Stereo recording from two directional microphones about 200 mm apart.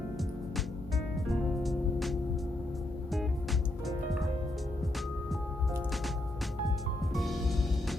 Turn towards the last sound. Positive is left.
turn(degrees=0)  # may be behind; listen again after turning